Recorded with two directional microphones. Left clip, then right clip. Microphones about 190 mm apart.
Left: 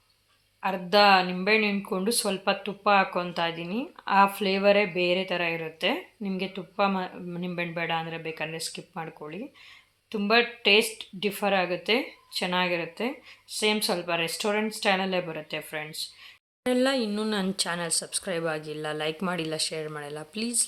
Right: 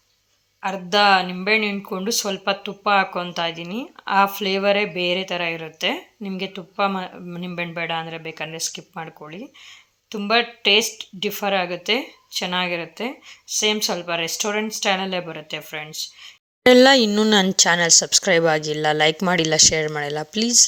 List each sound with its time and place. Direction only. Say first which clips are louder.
0.6 s speech: right 3 dB; 25° right (ahead or behind)
16.6 s speech: right 13 dB; 50° right (ahead or behind)